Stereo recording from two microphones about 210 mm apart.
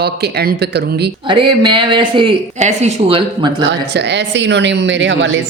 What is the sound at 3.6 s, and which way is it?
Speech, 55° right (ahead or behind).